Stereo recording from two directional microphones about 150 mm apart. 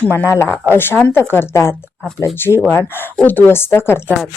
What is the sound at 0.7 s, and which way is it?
Speech, 15° left (ahead or behind).